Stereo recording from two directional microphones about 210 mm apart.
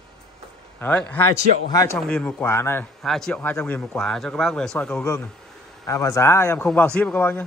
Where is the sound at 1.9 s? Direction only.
5° left (ahead or behind).